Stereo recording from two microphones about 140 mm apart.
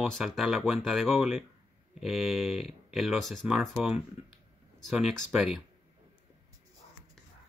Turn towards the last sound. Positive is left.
turn(degrees=-5)  # may be behind; listen again after turning